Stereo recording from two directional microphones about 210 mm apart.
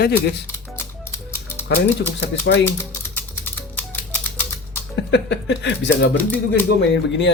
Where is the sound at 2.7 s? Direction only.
10° left (ahead or behind).